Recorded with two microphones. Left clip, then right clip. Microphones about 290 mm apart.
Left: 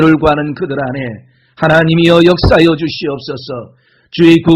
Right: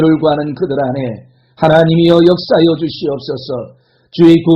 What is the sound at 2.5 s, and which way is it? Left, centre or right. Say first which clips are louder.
A man's voice: left 2 dB; left.